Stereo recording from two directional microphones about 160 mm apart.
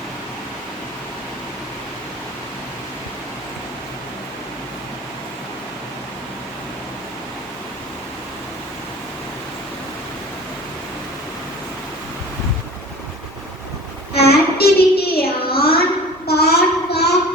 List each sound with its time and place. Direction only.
14.2 s child singing: 80° left